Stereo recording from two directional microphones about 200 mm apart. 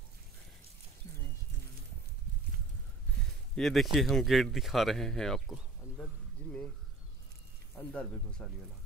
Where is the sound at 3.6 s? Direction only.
Centre (ahead or behind).